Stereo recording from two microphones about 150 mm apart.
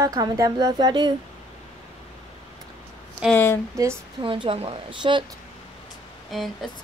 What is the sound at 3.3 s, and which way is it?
Speech, 15° left (ahead or behind).